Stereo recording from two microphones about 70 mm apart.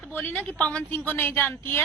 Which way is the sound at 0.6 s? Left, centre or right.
Centre.